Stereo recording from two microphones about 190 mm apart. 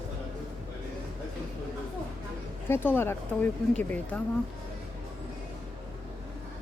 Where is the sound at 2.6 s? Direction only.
10° left (ahead or behind).